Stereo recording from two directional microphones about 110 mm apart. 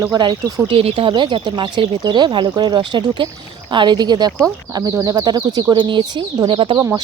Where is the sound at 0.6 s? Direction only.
60° right (ahead or behind).